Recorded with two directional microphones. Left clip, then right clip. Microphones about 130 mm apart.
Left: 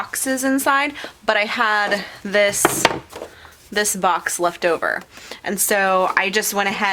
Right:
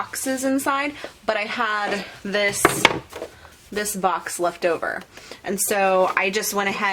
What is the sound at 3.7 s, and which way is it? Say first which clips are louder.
A woman's voice: left 4 dB; 50° left (ahead or behind).